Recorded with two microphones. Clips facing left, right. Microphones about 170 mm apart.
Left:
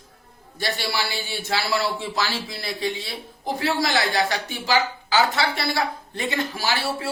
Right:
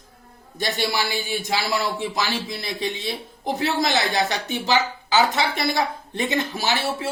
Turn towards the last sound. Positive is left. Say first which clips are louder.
# right 1 dB
turn(degrees=-20)  # may be behind; listen again after turning